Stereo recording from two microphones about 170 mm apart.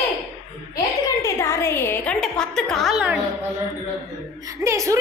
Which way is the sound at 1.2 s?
15° left (ahead or behind).